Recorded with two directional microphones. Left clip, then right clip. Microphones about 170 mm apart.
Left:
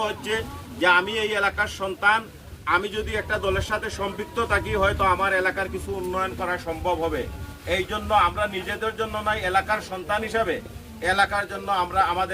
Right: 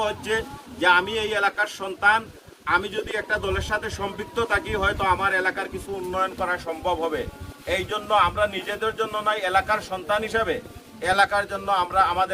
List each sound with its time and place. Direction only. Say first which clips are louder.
0.0 s a man's voice: right 1 dB; 20° right (ahead or behind)